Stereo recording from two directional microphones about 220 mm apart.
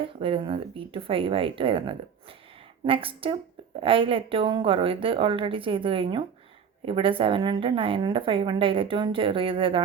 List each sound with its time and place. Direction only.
0.0 s a woman's voice: 25° right (ahead or behind)